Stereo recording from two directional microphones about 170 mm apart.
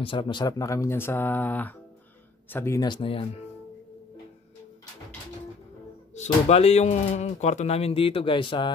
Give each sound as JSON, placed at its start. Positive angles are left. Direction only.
{"t": 0.0, "sound": "speech", "side_deg": 30}
{"t": 6.1, "sound": "speech", "side_deg": 40}